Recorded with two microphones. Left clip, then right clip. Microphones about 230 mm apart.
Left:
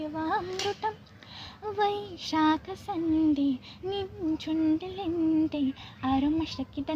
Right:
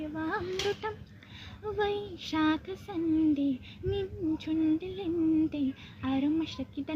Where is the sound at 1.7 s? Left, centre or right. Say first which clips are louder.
Left 3 dB; left.